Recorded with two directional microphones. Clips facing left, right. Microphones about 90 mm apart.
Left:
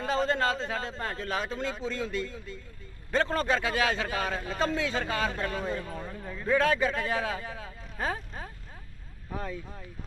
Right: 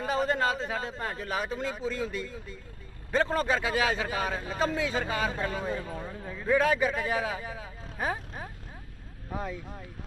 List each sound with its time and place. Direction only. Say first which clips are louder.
0.0 s a man's voice: even; 15° right (ahead or behind)